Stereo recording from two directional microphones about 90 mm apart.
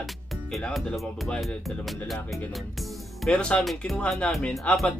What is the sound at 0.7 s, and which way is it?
Speech, 10° left (ahead or behind).